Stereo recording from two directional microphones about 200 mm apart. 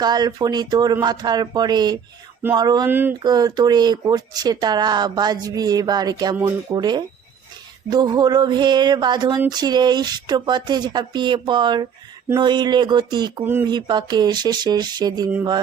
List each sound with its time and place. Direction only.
0.0 s speech: 20° right (ahead or behind)
6.7 s speech: 20° right (ahead or behind)
13.4 s speech: 10° right (ahead or behind)
13.7 s speech: 20° right (ahead or behind)